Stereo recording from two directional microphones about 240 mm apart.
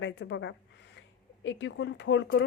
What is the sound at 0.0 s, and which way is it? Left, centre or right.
A woman's voice, left.